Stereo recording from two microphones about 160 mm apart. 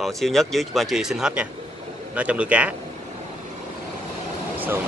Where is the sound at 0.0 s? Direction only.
Centre (ahead or behind).